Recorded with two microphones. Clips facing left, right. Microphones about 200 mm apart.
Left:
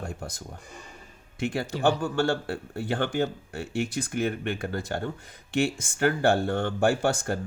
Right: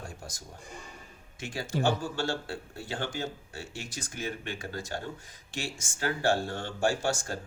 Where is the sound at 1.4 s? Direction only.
60° left (ahead or behind).